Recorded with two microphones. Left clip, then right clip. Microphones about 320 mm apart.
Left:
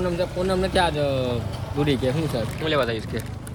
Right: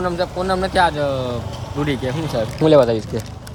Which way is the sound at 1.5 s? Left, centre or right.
Right.